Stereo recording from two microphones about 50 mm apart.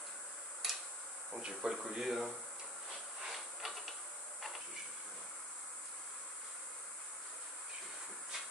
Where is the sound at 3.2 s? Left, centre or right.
Centre.